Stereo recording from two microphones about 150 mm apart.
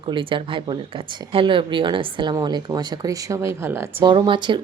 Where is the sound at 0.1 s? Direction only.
35° right (ahead or behind); by 3.8 s 15° right (ahead or behind).